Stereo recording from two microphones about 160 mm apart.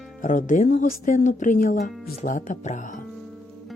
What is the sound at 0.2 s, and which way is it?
Speech, 55° left (ahead or behind).